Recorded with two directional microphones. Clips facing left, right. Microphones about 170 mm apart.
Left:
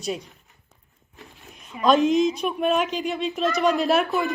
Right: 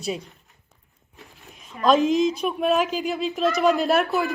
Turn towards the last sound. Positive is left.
turn(degrees=0)  # may be behind; listen again after turning